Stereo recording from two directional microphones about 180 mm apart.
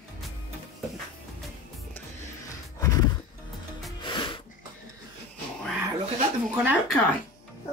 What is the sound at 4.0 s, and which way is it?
Music, 25° left (ahead or behind).